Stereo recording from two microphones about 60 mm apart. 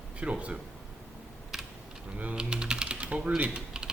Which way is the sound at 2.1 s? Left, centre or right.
Right.